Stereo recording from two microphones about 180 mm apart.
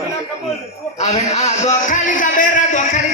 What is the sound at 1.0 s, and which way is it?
A man's voice, 40° left (ahead or behind).